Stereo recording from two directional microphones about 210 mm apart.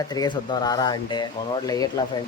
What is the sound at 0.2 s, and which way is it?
Speech, 20° left (ahead or behind).